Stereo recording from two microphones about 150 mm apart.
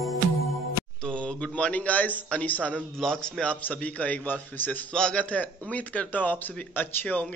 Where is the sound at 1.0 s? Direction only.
5° left (ahead or behind).